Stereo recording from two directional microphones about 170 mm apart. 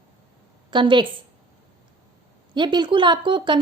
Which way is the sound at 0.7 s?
25° right (ahead or behind).